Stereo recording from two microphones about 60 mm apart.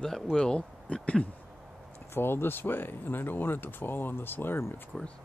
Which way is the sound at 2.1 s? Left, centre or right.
Left.